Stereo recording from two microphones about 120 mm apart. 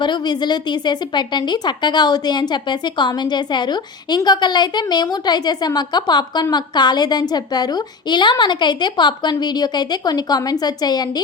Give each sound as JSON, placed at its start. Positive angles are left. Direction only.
{"t": 0.0, "sound": "a woman's voice", "side_deg": 40}